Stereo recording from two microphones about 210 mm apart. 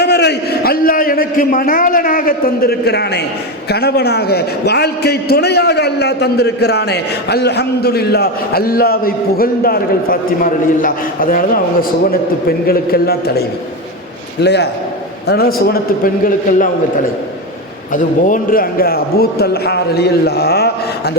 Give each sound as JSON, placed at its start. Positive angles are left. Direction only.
{"t": 0.0, "sound": "a man's voice", "side_deg": 50}
{"t": 14.4, "sound": "a man's voice", "side_deg": 55}
{"t": 17.9, "sound": "a man's voice", "side_deg": 40}